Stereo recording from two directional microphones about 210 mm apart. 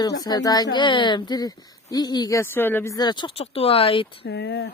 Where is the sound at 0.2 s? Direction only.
20° left (ahead or behind).